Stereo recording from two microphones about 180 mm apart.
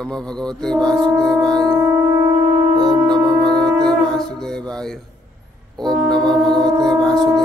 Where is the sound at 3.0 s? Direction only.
Centre (ahead or behind).